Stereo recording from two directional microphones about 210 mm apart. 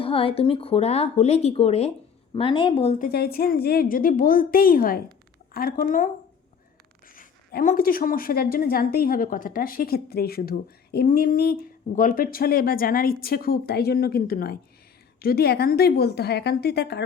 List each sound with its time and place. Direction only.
0.0 s speech: 25° left (ahead or behind)
3.0 s a woman's voice: 45° left (ahead or behind)
7.2 s a woman's voice: 40° left (ahead or behind)